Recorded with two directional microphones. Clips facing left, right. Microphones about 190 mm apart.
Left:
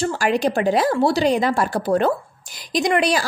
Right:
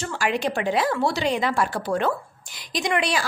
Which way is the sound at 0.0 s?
35° left (ahead or behind).